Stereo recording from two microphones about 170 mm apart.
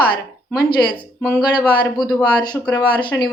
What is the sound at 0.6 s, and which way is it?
Speech, 65° left (ahead or behind).